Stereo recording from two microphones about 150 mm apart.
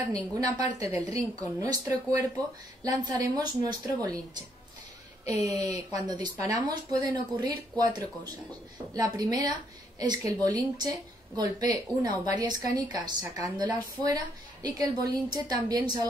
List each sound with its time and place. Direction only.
0.6 s a woman's voice: 45° left (ahead or behind)
1.1 s a woman's voice: 20° right (ahead or behind)
5.2 s a woman's voice: 20° right (ahead or behind)
8.9 s a woman's voice: 25° right (ahead or behind)